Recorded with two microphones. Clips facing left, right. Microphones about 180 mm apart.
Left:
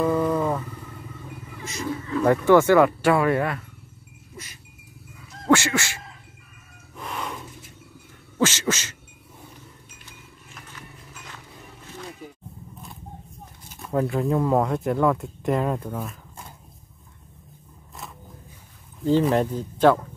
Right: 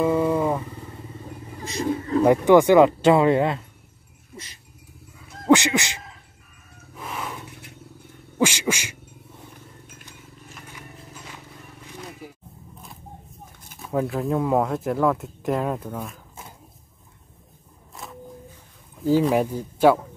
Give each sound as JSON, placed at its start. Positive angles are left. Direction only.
{"t": 0.0, "sound": "a sound", "side_deg": -10}
{"t": 1.2, "sound": "vehicle", "side_deg": -35}
{"t": 2.2, "sound": "speech", "side_deg": -15}
{"t": 5.5, "sound": "speech", "side_deg": -15}
{"t": 7.0, "sound": "vehicle", "side_deg": 0}
{"t": 8.4, "sound": "speech", "side_deg": -15}
{"t": 13.7, "sound": "speech", "side_deg": 0}
{"t": 19.0, "sound": "speech", "side_deg": -10}